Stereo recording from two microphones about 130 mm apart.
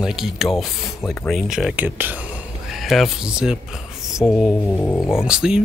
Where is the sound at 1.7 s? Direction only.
15° right (ahead or behind).